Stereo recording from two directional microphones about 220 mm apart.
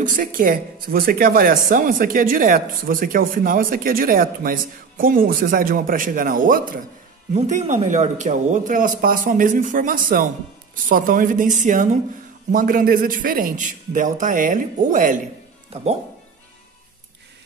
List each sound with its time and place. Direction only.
0.0 s speech: 40° right (ahead or behind)